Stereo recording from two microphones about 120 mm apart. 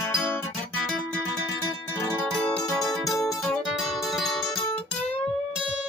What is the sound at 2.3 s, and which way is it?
Music, 5° left (ahead or behind).